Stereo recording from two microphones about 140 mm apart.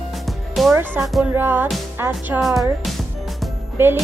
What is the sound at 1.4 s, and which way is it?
Speech, 15° right (ahead or behind).